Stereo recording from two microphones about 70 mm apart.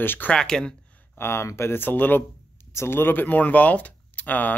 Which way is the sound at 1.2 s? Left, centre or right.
Left.